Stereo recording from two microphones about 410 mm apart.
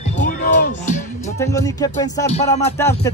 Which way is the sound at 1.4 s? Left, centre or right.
Centre.